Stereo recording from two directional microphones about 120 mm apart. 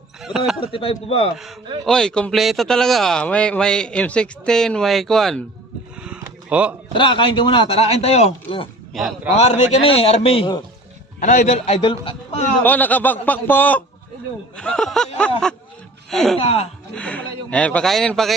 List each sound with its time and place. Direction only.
0.2 s speech: 5° right (ahead or behind)
0.6 s speech: 50° left (ahead or behind)
1.8 s speech: 5° left (ahead or behind)
6.5 s speech: 10° right (ahead or behind)
6.9 s speech: 40° left (ahead or behind)
8.9 s a man's voice: centre (ahead or behind)
9.3 s speech: 65° left (ahead or behind); by 10.6 s 50° left (ahead or behind)
11.2 s a man's voice: 90° left; by 12.5 s 55° left (ahead or behind)
12.6 s speech: 15° left (ahead or behind)
16.4 s a man's voice: 55° left (ahead or behind)
16.9 s speech: 10° left (ahead or behind)